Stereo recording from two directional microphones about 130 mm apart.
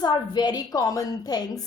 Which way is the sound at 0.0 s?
35° left (ahead or behind).